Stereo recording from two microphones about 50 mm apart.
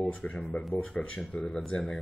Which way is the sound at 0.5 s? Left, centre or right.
Left.